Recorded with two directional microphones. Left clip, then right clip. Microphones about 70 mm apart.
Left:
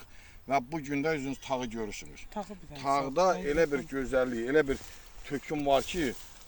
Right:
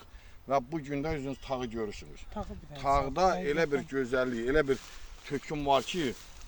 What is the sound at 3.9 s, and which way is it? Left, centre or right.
Speech, right.